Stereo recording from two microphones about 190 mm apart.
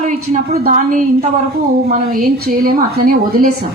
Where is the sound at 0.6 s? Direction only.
45° right (ahead or behind).